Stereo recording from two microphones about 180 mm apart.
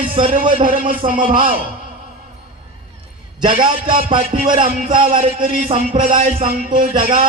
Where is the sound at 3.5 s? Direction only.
45° right (ahead or behind).